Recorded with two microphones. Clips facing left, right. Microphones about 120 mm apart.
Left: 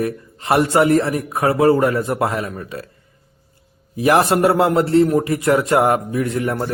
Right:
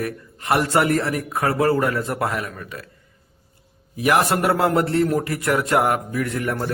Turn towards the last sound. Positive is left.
turn(degrees=20)  # may be behind; listen again after turning